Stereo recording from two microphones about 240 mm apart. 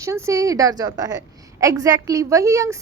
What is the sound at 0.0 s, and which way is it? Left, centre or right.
A woman's voice, centre.